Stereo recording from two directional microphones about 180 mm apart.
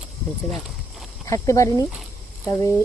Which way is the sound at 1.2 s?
15° left (ahead or behind).